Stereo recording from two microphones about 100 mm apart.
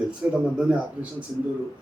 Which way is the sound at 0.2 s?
15° right (ahead or behind).